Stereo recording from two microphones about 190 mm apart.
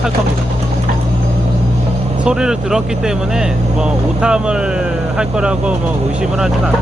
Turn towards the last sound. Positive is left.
turn(degrees=-5)  # may be behind; listen again after turning